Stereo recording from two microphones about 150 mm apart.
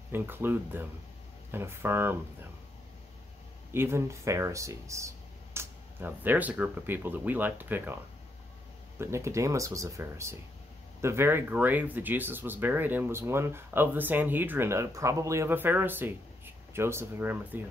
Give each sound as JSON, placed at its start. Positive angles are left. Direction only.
{"t": 0.1, "sound": "speech", "side_deg": -15}
{"t": 3.7, "sound": "speech", "side_deg": -15}